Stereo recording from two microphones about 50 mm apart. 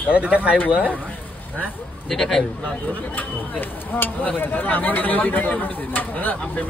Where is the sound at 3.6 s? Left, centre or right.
Left.